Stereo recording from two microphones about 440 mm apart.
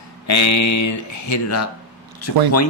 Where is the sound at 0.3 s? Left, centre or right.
Left.